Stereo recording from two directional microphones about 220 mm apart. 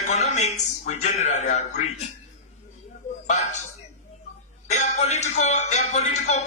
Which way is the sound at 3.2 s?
30° left (ahead or behind).